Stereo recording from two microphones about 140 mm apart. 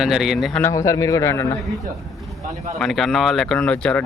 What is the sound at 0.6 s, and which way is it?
Speech, 25° left (ahead or behind).